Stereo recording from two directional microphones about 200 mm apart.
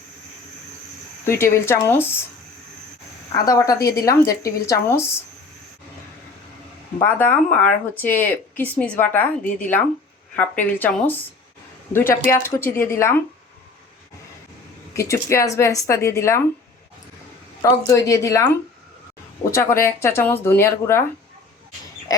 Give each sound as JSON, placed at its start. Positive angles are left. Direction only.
{"t": 1.2, "sound": "a woman's voice", "side_deg": 10}
{"t": 3.3, "sound": "a woman's voice", "side_deg": 15}
{"t": 3.8, "sound": "a woman's voice", "side_deg": 50}
{"t": 4.3, "sound": "a woman's voice", "side_deg": 15}
{"t": 7.0, "sound": "a woman's voice", "side_deg": 10}
{"t": 12.3, "sound": "a woman's voice", "side_deg": 10}
{"t": 14.9, "sound": "a woman's voice", "side_deg": 15}
{"t": 17.6, "sound": "a woman's voice", "side_deg": 15}